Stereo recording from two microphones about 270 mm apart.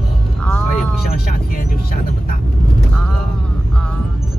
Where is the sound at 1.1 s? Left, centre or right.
Left.